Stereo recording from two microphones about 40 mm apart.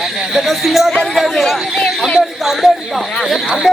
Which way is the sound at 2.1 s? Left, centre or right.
Centre.